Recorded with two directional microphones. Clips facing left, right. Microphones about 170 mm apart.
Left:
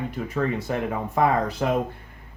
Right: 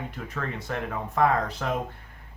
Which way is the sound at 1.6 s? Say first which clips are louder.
Left 6 dB; 15° left (ahead or behind).